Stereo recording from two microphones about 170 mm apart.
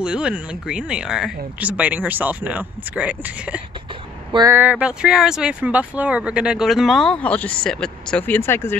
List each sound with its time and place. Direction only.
0.0 s speech: 5° right (ahead or behind)
4.3 s speech: 25° right (ahead or behind)
4.6 s speech: 10° right (ahead or behind); by 8.7 s 15° left (ahead or behind)